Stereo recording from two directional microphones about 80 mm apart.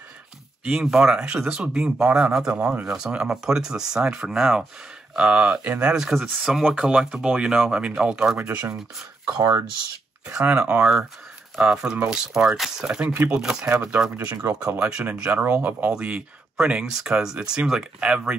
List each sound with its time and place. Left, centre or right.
0.7 s a man's voice: centre
8.4 s speech: right
9.4 s speech: right
10.2 s a man's voice: centre
14.4 s speech: right
15.3 s a man's voice: right